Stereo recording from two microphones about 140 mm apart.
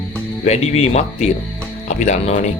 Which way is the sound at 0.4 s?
50° left (ahead or behind).